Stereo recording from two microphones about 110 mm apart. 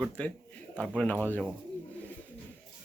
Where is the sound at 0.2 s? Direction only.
10° left (ahead or behind).